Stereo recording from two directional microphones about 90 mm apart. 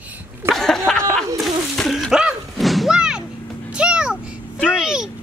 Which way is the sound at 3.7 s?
10° right (ahead or behind).